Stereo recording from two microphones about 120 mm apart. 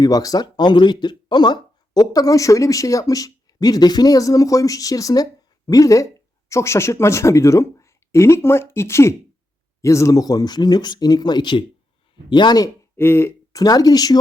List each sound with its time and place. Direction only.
0.0 s speech: 30° left (ahead or behind)
13.0 s speech: 20° left (ahead or behind)
13.6 s speech: 30° left (ahead or behind)